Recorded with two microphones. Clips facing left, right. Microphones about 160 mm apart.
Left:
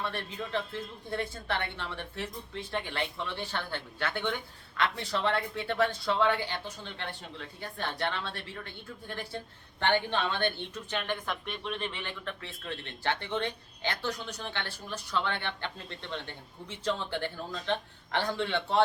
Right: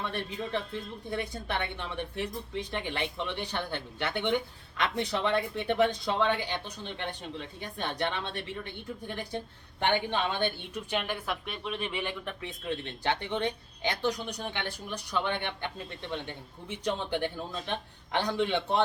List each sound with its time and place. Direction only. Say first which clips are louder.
0.1 s speech: right 2 dB; 15° right (ahead or behind)